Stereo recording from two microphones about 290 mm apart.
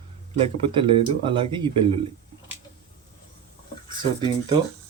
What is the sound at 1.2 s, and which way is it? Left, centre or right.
Speech, centre.